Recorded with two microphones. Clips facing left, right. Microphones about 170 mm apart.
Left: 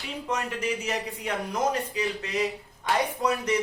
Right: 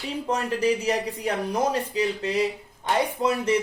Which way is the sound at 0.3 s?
35° right (ahead or behind).